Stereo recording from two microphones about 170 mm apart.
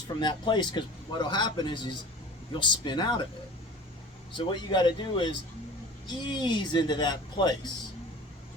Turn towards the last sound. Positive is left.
turn(degrees=25)  # may be behind; listen again after turning